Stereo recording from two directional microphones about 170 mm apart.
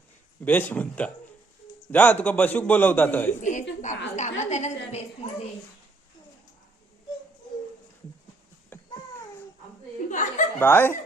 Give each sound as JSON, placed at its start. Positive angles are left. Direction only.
{"t": 0.4, "sound": "a man's voice", "side_deg": 10}
{"t": 3.4, "sound": "a woman's voice", "side_deg": 45}
{"t": 8.7, "sound": "babbling", "side_deg": 10}
{"t": 10.1, "sound": "chuckle", "side_deg": 45}
{"t": 10.6, "sound": "a man's voice", "side_deg": 10}